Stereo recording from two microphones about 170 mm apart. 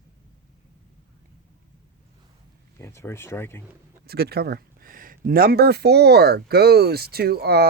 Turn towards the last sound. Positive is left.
turn(degrees=-70)  # may be behind; listen again after turning